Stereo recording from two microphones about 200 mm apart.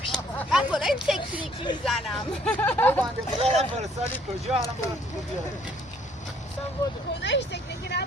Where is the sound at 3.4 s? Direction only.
30° right (ahead or behind).